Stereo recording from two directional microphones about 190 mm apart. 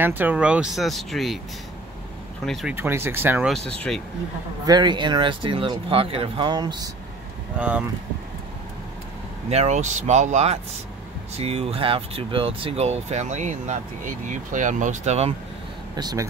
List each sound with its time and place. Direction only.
0.0 s speech: 10° right (ahead or behind)
2.4 s speech: centre (ahead or behind)
2.7 s speech: 10° right (ahead or behind)
4.6 s speech: 20° right (ahead or behind)
7.5 s speech: 10° right (ahead or behind)
9.5 s speech: 35° right (ahead or behind)
15.9 s speech: 20° right (ahead or behind)